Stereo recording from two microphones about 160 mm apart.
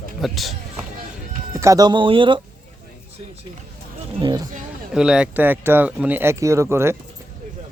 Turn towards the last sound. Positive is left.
turn(degrees=-15)  # may be behind; listen again after turning